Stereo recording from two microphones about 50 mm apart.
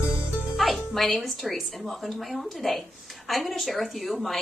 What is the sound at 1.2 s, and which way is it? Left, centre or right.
A woman's voice, centre.